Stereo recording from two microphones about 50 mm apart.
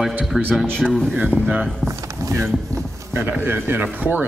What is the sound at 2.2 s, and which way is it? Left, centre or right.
Speech, right.